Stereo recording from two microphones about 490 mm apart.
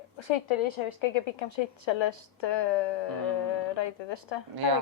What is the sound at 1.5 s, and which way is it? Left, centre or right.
Speech, left.